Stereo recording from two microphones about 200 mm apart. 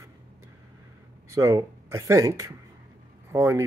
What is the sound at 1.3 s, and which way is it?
Speech, 15° right (ahead or behind).